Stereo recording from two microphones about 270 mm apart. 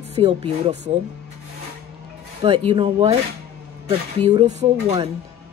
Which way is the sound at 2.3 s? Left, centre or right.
Right.